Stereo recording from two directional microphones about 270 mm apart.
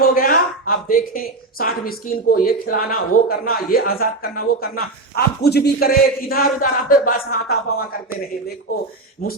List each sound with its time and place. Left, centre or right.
0.0 s speech: left